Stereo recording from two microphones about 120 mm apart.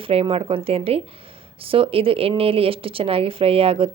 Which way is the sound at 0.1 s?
55° right (ahead or behind).